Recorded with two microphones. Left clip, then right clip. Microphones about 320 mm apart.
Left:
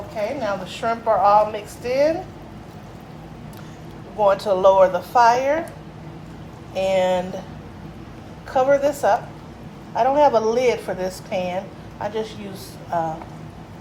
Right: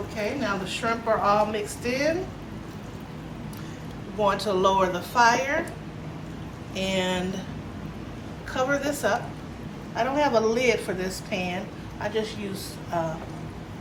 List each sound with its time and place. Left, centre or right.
0.4 s a woman's voice: left
4.2 s a woman's voice: left
6.7 s a woman's voice: left
8.5 s a woman's voice: left